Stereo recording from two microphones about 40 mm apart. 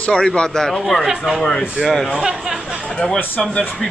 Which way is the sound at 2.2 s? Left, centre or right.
Centre.